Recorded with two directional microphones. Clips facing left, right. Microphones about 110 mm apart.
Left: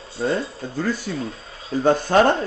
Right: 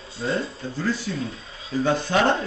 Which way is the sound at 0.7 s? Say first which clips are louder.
Left 2 dB; 45° left (ahead or behind).